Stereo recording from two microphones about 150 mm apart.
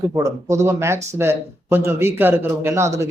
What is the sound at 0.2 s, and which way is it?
A man's voice, 20° right (ahead or behind).